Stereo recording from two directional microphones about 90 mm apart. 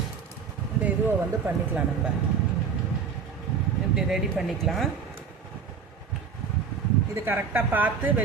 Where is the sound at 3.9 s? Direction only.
5° right (ahead or behind).